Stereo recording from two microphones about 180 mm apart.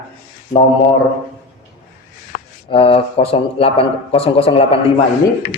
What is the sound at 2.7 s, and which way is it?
Speech, 30° left (ahead or behind).